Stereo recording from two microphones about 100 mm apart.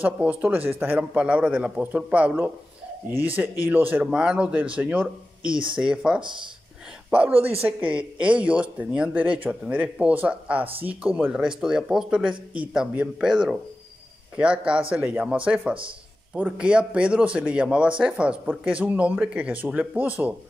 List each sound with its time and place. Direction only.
0.0 s a man's voice: 15° right (ahead or behind)
11.4 s a man's voice: 5° right (ahead or behind)